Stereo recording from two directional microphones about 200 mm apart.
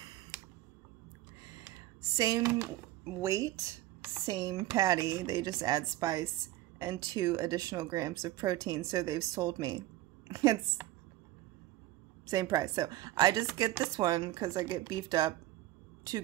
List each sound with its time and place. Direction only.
2.1 s a woman's voice: 15° right (ahead or behind)
12.3 s speech: 15° right (ahead or behind)